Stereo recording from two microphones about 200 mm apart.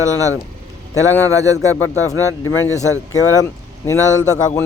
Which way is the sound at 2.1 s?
90° left.